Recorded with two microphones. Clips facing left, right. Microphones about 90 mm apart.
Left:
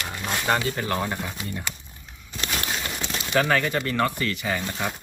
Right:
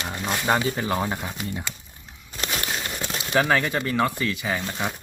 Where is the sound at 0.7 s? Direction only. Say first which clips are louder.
Right 1 dB; 5° right (ahead or behind).